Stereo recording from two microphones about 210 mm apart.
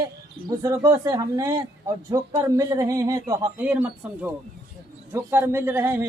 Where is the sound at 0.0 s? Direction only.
15° right (ahead or behind).